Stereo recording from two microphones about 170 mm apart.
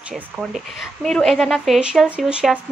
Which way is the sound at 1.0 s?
Centre (ahead or behind).